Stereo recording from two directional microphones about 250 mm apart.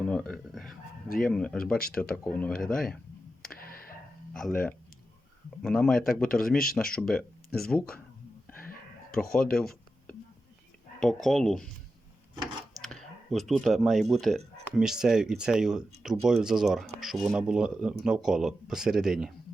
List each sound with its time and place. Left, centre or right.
0.0 s a sound: centre
1.2 s speech: centre
3.5 s tick-tock: left
4.4 s speech: centre
9.3 s a sound: centre
11.0 s speech: centre
12.8 s speech: centre